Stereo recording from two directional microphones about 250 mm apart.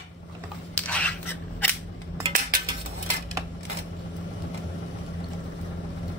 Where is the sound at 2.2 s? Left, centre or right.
Right.